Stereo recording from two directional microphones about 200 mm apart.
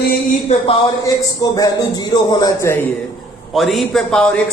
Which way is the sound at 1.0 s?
20° left (ahead or behind).